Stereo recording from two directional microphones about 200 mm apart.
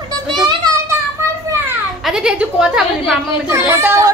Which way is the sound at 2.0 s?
5° right (ahead or behind).